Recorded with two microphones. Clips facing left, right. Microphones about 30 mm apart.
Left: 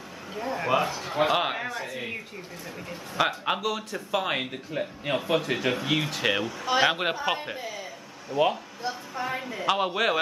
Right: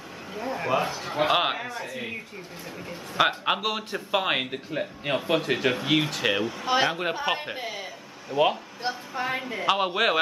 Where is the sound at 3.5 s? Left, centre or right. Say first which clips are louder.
Right 2 dB; right; by 6.4 s centre.